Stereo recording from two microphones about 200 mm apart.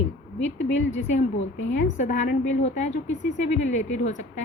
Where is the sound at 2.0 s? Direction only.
35° left (ahead or behind).